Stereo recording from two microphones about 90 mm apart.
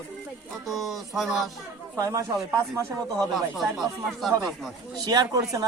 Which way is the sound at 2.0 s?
40° right (ahead or behind).